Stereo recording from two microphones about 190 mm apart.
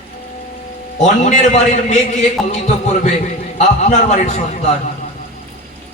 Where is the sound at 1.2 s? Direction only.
40° left (ahead or behind).